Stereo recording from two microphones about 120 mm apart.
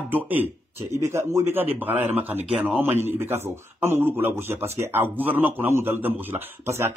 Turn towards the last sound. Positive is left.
turn(degrees=-20)  # may be behind; listen again after turning